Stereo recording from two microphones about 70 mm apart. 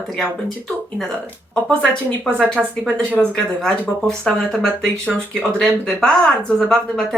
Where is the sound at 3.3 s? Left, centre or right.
Centre.